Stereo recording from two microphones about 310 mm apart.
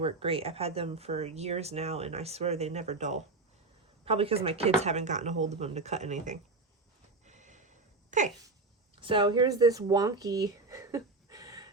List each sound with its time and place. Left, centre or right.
0.0 s speech: centre
7.3 s snort: right
8.1 s speech: right